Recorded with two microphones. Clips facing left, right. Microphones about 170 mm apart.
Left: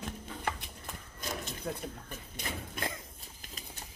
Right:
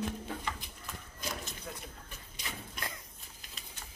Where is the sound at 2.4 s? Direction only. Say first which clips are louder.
Left 5 dB; 55° left (ahead or behind).